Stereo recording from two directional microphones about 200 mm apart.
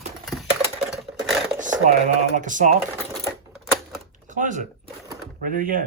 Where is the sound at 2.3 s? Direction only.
40° right (ahead or behind).